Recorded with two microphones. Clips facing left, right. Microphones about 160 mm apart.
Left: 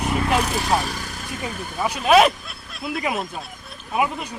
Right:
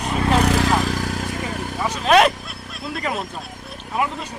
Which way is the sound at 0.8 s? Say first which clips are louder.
Right 7 dB; 90° right.